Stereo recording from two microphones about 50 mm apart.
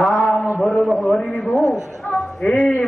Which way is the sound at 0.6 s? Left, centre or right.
Centre.